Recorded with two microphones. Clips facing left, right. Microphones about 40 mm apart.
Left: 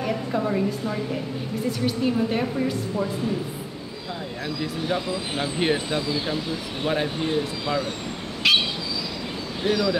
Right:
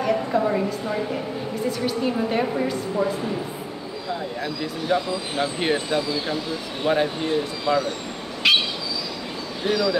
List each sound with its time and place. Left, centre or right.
0.0 s a sound: centre
0.8 s a woman's voice: centre
4.1 s speech: centre
8.4 s bird: centre
9.7 s speech: centre